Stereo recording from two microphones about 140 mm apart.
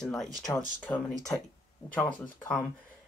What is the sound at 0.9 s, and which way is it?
Speech, 10° left (ahead or behind).